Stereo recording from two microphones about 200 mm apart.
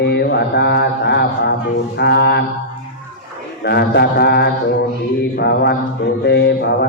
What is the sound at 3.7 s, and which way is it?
Mantra, 55° left (ahead or behind).